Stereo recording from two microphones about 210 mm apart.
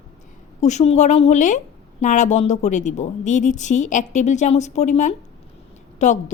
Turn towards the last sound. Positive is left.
turn(degrees=35)  # may be behind; listen again after turning